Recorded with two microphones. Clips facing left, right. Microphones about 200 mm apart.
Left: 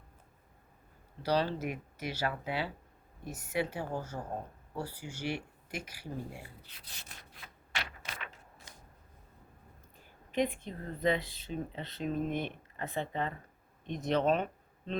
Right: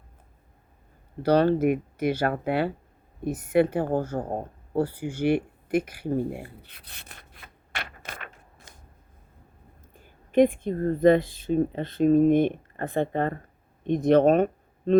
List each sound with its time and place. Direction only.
1.2 s a woman's voice: 55° right (ahead or behind)
9.9 s speech: 50° right (ahead or behind)